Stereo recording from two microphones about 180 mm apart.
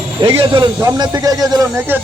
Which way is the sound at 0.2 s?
30° right (ahead or behind).